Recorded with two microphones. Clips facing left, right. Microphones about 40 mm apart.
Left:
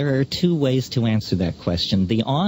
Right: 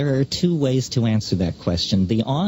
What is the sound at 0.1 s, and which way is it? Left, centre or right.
Speech, left.